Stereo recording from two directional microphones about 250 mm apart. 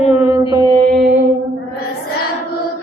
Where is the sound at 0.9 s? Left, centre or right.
Centre.